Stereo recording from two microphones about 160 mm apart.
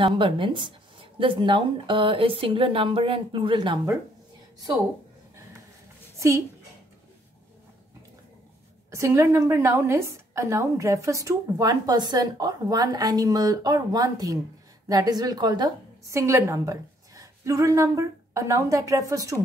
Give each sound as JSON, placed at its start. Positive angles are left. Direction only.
{"t": 0.0, "sound": "speech", "side_deg": -30}
{"t": 6.1, "sound": "a sound", "side_deg": -20}
{"t": 8.9, "sound": "a woman's voice", "side_deg": -15}